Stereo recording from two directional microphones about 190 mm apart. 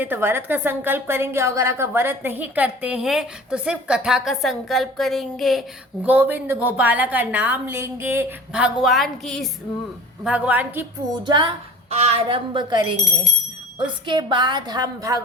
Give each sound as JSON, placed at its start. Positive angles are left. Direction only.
{"t": 0.0, "sound": "a woman's voice", "side_deg": -10}
{"t": 11.2, "sound": "a woman's voice", "side_deg": -25}
{"t": 14.1, "sound": "a woman's voice", "side_deg": -25}